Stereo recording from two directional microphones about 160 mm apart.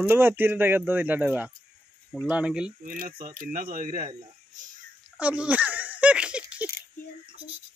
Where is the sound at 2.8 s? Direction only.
60° right (ahead or behind).